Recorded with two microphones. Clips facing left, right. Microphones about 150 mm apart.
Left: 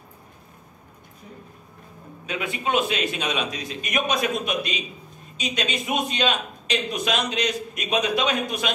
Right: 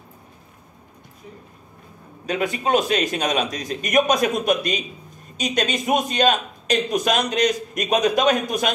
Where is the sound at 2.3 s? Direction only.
40° right (ahead or behind).